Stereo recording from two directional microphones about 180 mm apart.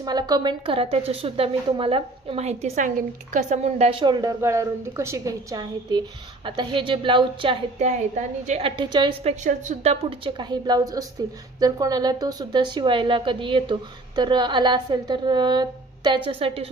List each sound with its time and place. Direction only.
0.0 s a woman's voice: 25° right (ahead or behind)
4.0 s a woman's voice: 20° right (ahead or behind)
7.8 s a woman's voice: 40° right (ahead or behind)
9.4 s a woman's voice: 40° right (ahead or behind)